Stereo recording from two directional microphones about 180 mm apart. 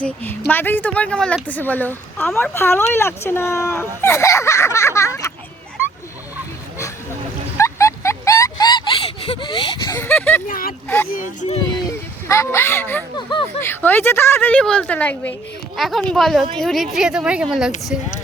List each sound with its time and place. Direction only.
0.0 s speech: 10° left (ahead or behind)
7.6 s a sound: 15° left (ahead or behind)
9.9 s speech: 10° left (ahead or behind)
10.4 s speech: 50° left (ahead or behind)
10.8 s speech: 10° left (ahead or behind)
11.1 s speech: 45° left (ahead or behind)
11.9 s a woman's voice: 15° left (ahead or behind); by 17.7 s 5° right (ahead or behind)